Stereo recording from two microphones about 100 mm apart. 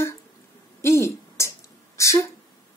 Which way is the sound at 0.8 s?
30° left (ahead or behind).